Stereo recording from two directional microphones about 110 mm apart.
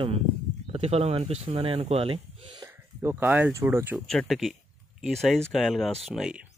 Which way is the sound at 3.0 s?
20° right (ahead or behind).